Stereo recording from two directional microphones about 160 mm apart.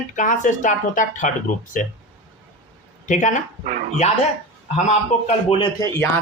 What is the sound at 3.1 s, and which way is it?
Speech, 50° left (ahead or behind).